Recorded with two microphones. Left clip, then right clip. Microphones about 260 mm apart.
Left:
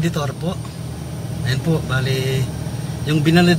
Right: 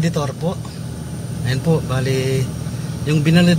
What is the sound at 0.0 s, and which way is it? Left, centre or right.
Speech, centre.